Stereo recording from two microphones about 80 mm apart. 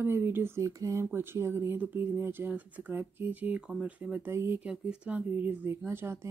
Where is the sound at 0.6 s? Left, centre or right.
Right.